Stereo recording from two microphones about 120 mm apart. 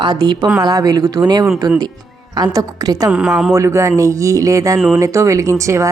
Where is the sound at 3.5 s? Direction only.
25° right (ahead or behind).